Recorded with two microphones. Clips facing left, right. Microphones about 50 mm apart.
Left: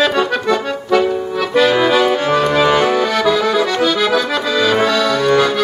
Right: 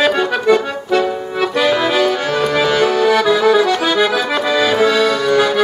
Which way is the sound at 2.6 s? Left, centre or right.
Centre.